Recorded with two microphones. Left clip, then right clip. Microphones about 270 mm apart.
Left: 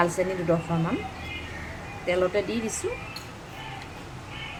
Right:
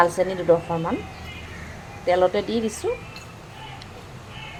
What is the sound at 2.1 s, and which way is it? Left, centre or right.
Speech, centre.